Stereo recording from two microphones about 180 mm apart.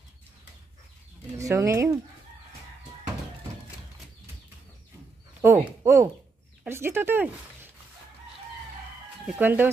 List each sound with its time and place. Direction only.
1.4 s speech: 15° right (ahead or behind)
5.4 s speech: 15° right (ahead or behind)
9.2 s speech: 10° right (ahead or behind)